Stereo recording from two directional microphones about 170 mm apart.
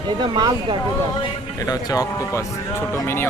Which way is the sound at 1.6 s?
20° left (ahead or behind).